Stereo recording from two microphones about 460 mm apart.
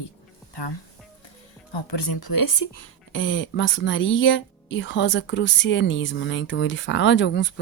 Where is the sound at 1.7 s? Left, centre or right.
Left.